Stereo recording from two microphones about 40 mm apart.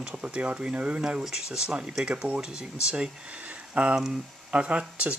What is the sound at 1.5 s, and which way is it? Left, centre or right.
Speech, centre.